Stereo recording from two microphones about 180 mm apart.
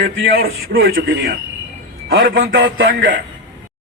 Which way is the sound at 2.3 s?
90° right.